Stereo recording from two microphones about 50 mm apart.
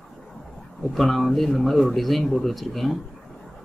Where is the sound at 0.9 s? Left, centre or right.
Centre.